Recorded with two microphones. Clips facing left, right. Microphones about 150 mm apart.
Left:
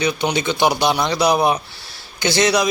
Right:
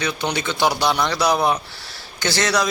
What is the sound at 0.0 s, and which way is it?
Speech, 15° left (ahead or behind).